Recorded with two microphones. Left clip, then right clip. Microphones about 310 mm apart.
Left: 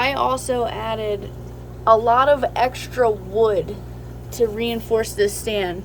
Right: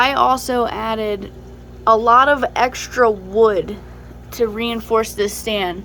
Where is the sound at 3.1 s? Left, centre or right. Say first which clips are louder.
Right 4 dB; right.